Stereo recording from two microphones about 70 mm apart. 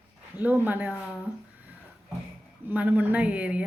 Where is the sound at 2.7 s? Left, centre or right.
Right.